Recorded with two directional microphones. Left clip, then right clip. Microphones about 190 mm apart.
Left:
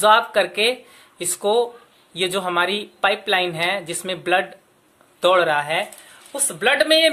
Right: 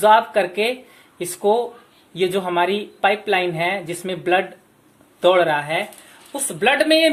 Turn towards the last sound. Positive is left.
turn(degrees=5)  # may be behind; listen again after turning